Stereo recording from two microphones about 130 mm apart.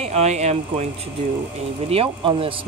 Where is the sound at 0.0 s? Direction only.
55° right (ahead or behind).